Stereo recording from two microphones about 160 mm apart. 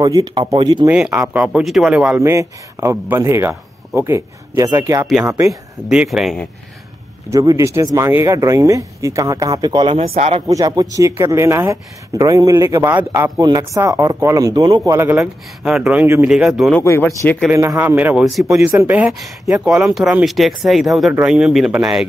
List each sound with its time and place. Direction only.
0.0 s speech: 25° right (ahead or behind)
0.8 s a man's voice: 5° right (ahead or behind)
2.1 s a man's voice: 20° right (ahead or behind)
5.5 s speech: 5° right (ahead or behind)
7.2 s speech: 20° right (ahead or behind)
14.9 s a man's voice: 15° right (ahead or behind)
15.1 s speech: 5° right (ahead or behind)
16.8 s speech: 15° left (ahead or behind)
17.5 s a man's voice: 15° right (ahead or behind)